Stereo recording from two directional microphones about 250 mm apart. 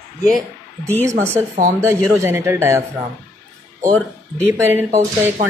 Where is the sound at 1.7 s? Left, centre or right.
Centre.